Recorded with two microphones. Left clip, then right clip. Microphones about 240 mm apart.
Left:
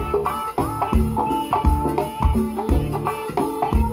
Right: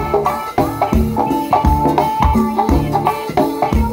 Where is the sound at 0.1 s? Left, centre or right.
Right.